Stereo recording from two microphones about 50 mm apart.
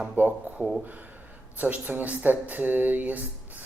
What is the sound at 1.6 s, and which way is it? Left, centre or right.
Speech, right.